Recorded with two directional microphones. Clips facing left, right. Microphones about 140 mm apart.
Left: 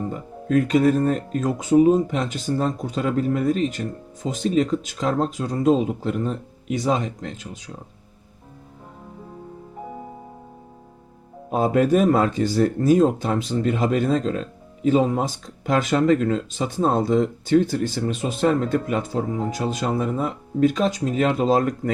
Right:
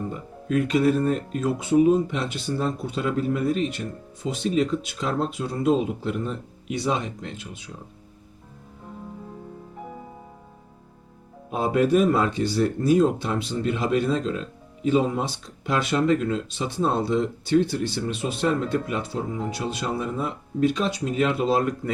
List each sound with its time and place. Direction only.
0.4 s speech: 45° left (ahead or behind)
11.5 s speech: 45° left (ahead or behind)